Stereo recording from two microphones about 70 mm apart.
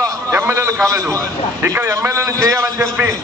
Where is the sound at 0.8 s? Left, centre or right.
Right.